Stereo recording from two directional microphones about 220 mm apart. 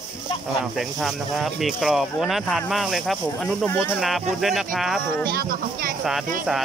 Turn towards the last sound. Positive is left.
turn(degrees=-40)  # may be behind; listen again after turning